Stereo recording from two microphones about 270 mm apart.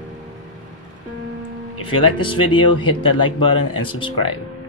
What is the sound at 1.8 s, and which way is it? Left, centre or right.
Speech, centre.